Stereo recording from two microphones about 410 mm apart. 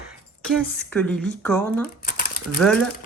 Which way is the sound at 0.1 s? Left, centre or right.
Centre.